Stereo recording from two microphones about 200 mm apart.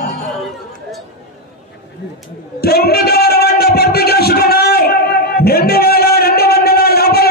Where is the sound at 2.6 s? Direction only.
50° left (ahead or behind).